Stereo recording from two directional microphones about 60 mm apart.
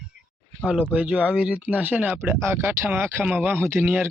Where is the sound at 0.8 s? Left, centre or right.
Centre.